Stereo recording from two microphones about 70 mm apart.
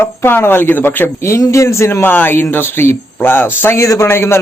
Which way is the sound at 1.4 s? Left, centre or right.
Left.